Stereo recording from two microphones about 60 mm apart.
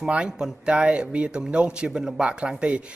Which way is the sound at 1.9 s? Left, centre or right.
Centre.